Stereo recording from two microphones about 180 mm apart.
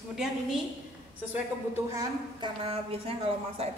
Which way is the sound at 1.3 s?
10° right (ahead or behind).